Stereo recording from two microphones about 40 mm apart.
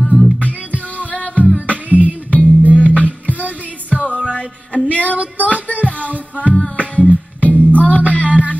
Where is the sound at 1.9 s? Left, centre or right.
Right.